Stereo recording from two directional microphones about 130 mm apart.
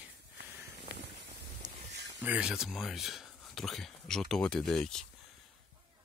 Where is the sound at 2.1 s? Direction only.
10° right (ahead or behind).